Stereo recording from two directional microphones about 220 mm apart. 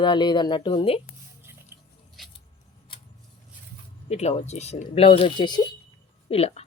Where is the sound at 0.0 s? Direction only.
20° left (ahead or behind).